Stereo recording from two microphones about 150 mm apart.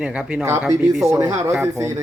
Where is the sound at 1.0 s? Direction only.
20° right (ahead or behind).